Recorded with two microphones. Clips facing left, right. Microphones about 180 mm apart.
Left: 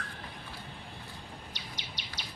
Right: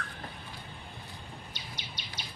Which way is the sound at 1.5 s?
80° left.